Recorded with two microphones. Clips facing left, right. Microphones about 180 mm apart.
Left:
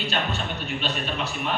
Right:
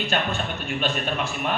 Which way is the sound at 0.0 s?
50° right (ahead or behind).